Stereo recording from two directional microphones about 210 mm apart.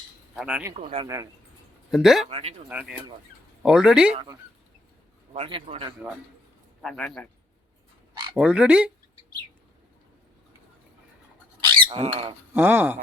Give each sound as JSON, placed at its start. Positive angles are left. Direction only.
{"t": 0.3, "sound": "speech", "side_deg": -5}
{"t": 0.7, "sound": "a man's voice", "side_deg": -25}
{"t": 1.0, "sound": "speech", "side_deg": -15}
{"t": 1.9, "sound": "speech", "side_deg": 0}
{"t": 2.3, "sound": "a man's voice", "side_deg": -30}
{"t": 3.6, "sound": "speech", "side_deg": -5}
{"t": 5.3, "sound": "a man's voice", "side_deg": -25}
{"t": 6.8, "sound": "speech", "side_deg": 0}
{"t": 8.4, "sound": "speech", "side_deg": -5}
{"t": 11.9, "sound": "a man's voice", "side_deg": -25}
{"t": 12.5, "sound": "speech", "side_deg": -10}